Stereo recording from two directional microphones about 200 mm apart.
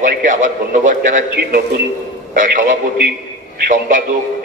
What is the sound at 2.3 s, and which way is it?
A man's voice, 40° right (ahead or behind).